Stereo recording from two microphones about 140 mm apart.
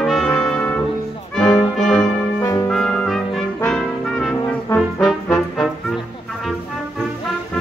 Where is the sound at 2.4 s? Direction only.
20° left (ahead or behind).